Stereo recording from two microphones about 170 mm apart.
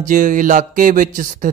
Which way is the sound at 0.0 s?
50° right (ahead or behind).